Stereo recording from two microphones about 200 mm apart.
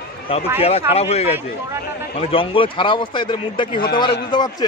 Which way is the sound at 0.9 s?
30° left (ahead or behind).